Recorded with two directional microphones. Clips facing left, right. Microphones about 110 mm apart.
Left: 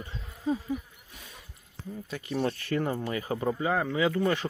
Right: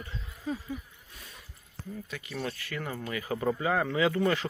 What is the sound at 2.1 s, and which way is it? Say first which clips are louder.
Speech: left 7 dB; 30° left (ahead or behind).